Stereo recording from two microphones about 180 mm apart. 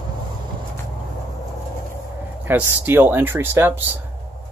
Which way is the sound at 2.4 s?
10° right (ahead or behind).